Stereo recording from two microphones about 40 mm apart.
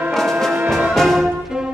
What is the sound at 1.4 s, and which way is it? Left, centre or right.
Music, centre.